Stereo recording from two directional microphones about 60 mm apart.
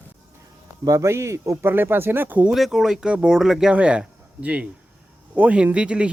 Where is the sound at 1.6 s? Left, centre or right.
Right.